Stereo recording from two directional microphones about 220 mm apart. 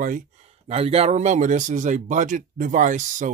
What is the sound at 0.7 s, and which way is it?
Speech, 30° right (ahead or behind).